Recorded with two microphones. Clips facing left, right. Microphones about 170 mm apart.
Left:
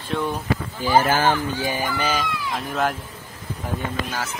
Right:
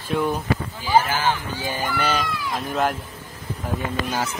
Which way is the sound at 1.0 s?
50° left (ahead or behind).